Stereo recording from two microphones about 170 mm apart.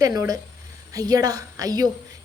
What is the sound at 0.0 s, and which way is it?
A woman's voice, 20° right (ahead or behind).